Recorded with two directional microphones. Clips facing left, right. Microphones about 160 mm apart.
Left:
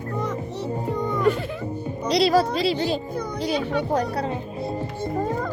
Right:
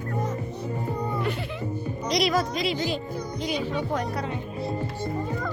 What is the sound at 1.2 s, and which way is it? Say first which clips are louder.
Speech: left 7 dB; 45° left (ahead or behind).